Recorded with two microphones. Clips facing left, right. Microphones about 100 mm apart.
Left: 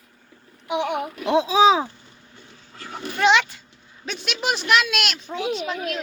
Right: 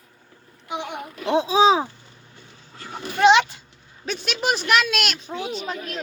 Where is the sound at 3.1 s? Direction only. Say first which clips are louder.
Right 3 dB; 20° right (ahead or behind).